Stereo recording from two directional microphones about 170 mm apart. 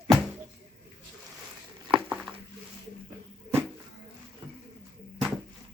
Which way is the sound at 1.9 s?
5° right (ahead or behind).